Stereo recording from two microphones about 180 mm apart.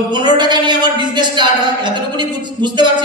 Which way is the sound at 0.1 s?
25° right (ahead or behind).